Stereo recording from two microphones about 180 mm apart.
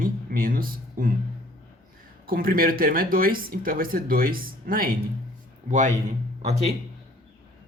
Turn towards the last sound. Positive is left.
turn(degrees=-35)  # may be behind; listen again after turning